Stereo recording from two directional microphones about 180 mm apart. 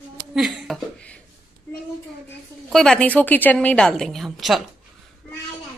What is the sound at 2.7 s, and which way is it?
A woman's voice, 5° left (ahead or behind).